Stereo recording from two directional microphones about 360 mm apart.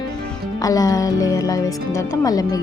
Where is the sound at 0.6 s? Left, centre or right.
Centre.